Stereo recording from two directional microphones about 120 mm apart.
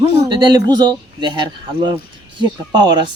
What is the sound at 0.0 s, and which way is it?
Speech, 40° right (ahead or behind).